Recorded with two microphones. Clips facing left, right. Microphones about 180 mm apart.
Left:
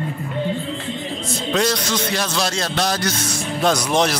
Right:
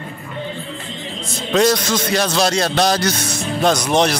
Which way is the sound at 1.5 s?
45° right (ahead or behind).